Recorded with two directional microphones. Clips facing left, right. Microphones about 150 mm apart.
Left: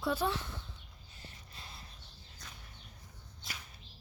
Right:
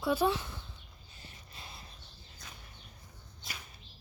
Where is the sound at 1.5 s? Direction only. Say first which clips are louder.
Right 3 dB; 15° right (ahead or behind).